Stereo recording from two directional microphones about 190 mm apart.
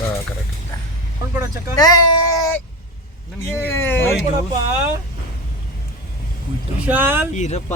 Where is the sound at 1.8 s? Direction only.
20° left (ahead or behind).